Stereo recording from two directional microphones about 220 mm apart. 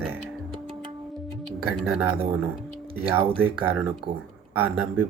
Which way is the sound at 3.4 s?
5° right (ahead or behind).